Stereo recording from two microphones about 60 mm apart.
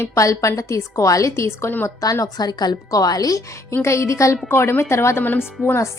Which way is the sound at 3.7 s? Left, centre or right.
Left.